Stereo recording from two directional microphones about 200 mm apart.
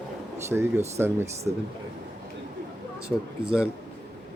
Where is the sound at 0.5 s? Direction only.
Centre (ahead or behind).